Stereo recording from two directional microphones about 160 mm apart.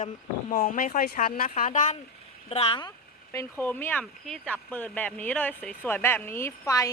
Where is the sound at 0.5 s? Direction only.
65° left (ahead or behind).